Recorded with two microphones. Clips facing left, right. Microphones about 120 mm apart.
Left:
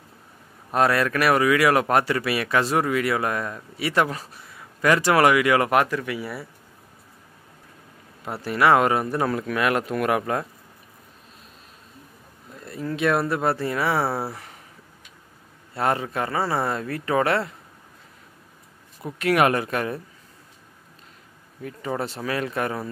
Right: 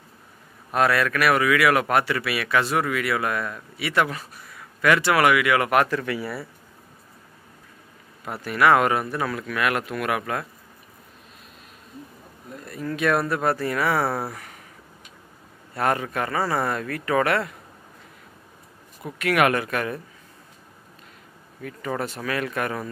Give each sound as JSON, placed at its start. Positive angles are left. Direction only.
{"t": 0.7, "sound": "speech", "side_deg": 30}
{"t": 5.9, "sound": "speech", "side_deg": 10}
{"t": 8.3, "sound": "speech", "side_deg": 30}
{"t": 12.6, "sound": "speech", "side_deg": 25}
{"t": 14.3, "sound": "a sound", "side_deg": 25}
{"t": 15.7, "sound": "speech", "side_deg": 25}
{"t": 19.1, "sound": "speech", "side_deg": 30}
{"t": 21.5, "sound": "speech", "side_deg": 25}